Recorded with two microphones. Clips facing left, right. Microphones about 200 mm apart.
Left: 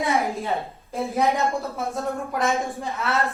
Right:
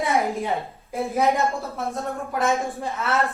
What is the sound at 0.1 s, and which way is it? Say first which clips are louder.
Speech: right 1 dB; 15° right (ahead or behind).